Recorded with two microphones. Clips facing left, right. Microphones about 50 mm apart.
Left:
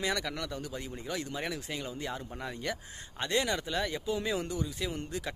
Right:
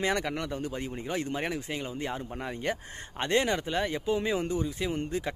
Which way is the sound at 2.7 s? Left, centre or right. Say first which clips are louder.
Right 4 dB; right.